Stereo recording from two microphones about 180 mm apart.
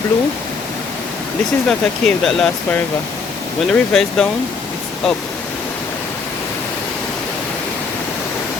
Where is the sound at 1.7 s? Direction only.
Centre (ahead or behind).